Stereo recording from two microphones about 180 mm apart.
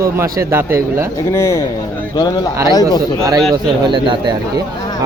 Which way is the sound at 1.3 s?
15° left (ahead or behind).